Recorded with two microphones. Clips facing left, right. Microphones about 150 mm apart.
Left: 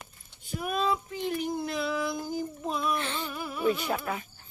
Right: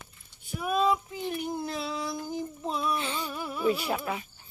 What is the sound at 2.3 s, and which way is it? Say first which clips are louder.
Child singing: left 1 dB; 25° right (ahead or behind).